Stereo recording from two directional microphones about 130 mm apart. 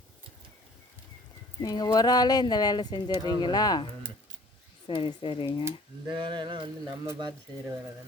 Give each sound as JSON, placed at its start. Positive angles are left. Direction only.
{"t": 1.6, "sound": "speech", "side_deg": 30}
{"t": 4.9, "sound": "speech", "side_deg": 40}
{"t": 6.1, "sound": "speech", "side_deg": -35}